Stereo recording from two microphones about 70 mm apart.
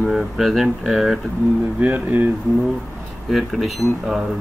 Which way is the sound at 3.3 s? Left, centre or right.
Centre.